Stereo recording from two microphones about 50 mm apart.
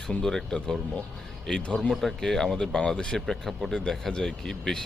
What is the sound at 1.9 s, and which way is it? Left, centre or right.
Speech, centre.